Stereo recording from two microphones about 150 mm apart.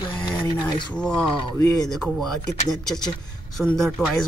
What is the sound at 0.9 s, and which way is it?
Speech, 5° left (ahead or behind).